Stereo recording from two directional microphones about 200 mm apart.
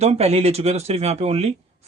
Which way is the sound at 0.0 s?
35° right (ahead or behind).